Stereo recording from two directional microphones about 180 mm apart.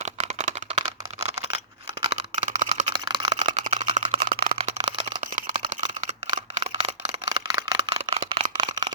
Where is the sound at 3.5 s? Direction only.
40° right (ahead or behind).